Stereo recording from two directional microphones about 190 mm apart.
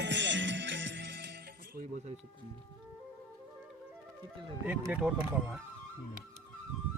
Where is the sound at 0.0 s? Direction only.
65° right (ahead or behind).